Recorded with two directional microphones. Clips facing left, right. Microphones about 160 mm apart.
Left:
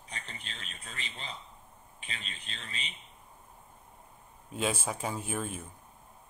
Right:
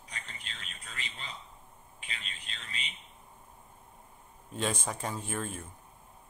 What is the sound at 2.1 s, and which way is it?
Speech, 30° left (ahead or behind).